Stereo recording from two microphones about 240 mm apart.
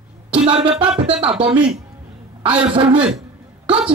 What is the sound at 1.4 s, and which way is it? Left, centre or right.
Speech, right.